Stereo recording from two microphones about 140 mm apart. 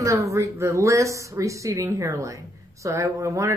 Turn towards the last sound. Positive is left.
turn(degrees=-20)  # may be behind; listen again after turning